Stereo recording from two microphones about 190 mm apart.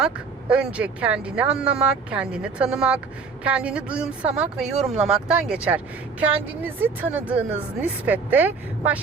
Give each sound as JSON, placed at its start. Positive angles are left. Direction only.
{"t": 0.5, "sound": "speech", "side_deg": -5}